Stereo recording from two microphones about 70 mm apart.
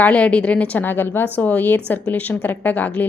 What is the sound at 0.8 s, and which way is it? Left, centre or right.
A woman's voice, left.